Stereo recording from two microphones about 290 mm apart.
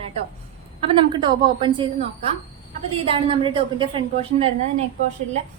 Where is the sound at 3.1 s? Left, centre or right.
Centre.